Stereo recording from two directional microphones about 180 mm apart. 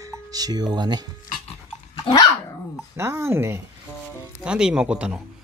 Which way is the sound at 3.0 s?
15° right (ahead or behind).